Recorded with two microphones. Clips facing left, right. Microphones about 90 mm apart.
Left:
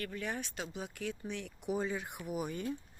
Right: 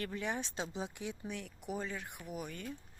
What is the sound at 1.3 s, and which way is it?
Speech, centre (ahead or behind).